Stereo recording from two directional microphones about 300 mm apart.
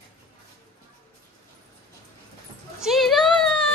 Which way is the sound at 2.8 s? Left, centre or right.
Centre.